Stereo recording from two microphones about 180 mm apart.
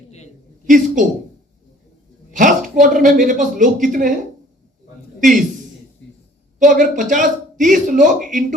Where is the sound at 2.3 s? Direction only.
45° right (ahead or behind).